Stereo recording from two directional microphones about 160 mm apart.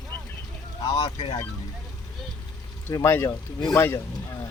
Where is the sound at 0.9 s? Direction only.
25° left (ahead or behind).